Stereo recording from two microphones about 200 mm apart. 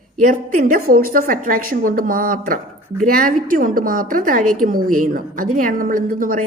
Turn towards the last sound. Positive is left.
turn(degrees=-45)  # may be behind; listen again after turning